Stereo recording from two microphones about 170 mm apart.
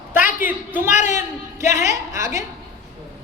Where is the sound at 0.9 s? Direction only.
45° left (ahead or behind).